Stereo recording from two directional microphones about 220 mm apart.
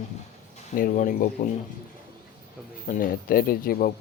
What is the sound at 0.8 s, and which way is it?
Speech, 40° left (ahead or behind).